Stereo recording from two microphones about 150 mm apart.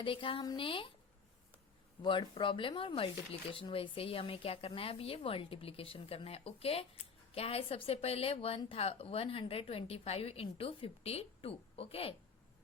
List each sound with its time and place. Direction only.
0.0 s speech: 35° left (ahead or behind)
2.0 s speech: 30° left (ahead or behind)